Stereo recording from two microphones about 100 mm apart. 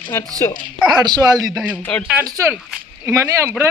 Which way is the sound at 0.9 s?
45° right (ahead or behind).